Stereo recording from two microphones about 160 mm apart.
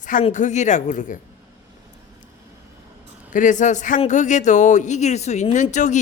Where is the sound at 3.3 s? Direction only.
50° left (ahead or behind).